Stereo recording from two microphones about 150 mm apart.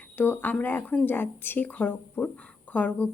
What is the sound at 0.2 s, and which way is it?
A woman's voice, 10° left (ahead or behind).